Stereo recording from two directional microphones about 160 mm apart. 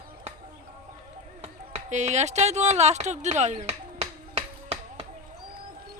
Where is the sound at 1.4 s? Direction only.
45° right (ahead or behind).